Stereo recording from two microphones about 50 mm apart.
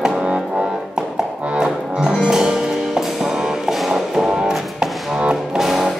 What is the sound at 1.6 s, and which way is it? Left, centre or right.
Music, centre.